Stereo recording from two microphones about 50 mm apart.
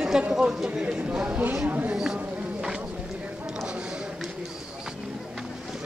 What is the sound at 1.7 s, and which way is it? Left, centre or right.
Speech, right.